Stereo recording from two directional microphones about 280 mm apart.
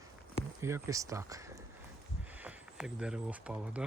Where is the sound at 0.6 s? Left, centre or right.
Centre.